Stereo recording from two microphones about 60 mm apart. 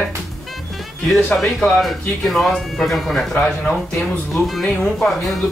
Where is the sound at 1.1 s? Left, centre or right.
Centre.